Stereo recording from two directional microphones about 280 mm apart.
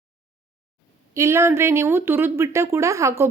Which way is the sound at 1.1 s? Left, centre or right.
Centre.